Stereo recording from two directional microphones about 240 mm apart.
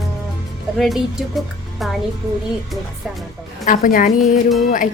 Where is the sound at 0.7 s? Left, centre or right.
Centre.